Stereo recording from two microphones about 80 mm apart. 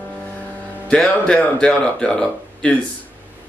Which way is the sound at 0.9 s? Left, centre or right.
Centre.